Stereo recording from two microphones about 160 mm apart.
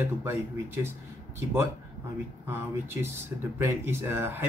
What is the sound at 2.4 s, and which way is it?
Speech, 15° right (ahead or behind).